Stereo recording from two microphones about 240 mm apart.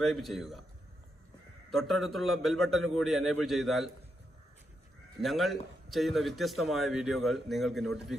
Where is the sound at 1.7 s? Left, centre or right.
Centre.